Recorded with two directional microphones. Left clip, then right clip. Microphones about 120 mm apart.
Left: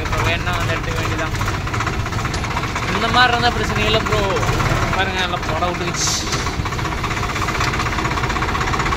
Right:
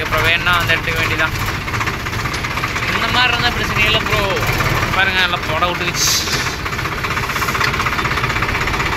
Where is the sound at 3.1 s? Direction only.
55° left (ahead or behind).